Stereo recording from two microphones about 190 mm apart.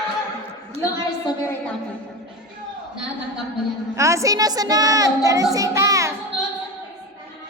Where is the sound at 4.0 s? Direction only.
15° right (ahead or behind).